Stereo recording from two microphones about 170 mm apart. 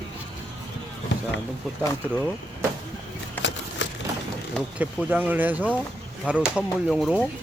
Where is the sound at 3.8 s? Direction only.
90° left.